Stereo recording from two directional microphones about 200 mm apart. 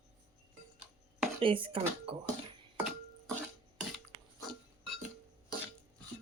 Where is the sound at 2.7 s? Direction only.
5° right (ahead or behind).